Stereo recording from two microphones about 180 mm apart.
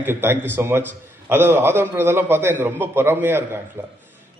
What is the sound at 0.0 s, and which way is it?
A man's voice, 10° right (ahead or behind).